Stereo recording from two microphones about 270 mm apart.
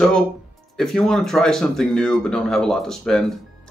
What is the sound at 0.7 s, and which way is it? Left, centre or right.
Speech, centre.